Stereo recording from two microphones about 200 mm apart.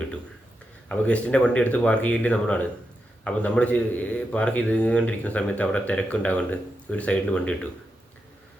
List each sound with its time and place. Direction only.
0.9 s a man's voice: 5° left (ahead or behind)